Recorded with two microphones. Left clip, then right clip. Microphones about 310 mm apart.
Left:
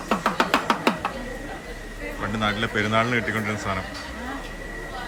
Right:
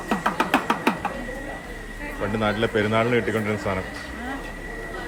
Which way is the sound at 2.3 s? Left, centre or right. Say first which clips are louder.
Right 2 dB; centre.